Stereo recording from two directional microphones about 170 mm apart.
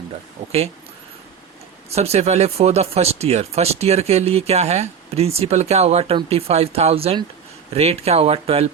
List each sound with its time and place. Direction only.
1.9 s speech: 40° right (ahead or behind)